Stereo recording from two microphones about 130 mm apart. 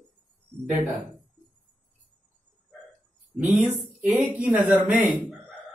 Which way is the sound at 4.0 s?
10° right (ahead or behind).